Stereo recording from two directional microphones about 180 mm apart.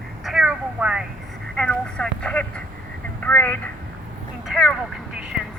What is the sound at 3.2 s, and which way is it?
Speech, 10° left (ahead or behind).